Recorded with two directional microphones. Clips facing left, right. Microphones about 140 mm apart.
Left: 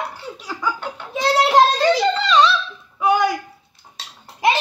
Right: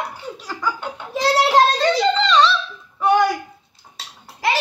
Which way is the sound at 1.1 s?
Centre (ahead or behind).